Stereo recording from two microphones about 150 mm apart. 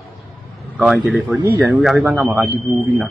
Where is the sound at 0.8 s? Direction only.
5° right (ahead or behind).